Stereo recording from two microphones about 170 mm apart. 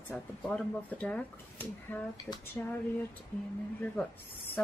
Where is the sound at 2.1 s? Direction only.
20° left (ahead or behind).